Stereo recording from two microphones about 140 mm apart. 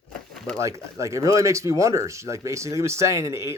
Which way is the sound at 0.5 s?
20° right (ahead or behind).